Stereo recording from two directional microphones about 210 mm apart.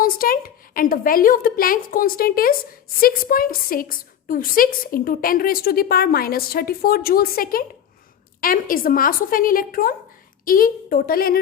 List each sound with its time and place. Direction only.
0.0 s a woman's voice: 45° left (ahead or behind)